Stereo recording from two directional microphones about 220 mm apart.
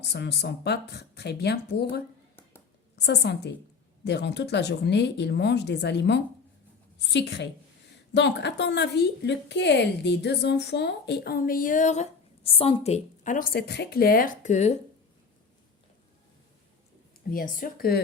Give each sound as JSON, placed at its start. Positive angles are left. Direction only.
{"t": 0.0, "sound": "a woman's voice", "side_deg": 50}
{"t": 17.3, "sound": "speech", "side_deg": 40}